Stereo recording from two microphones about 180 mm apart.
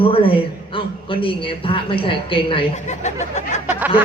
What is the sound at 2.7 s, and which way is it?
Speech, 40° left (ahead or behind).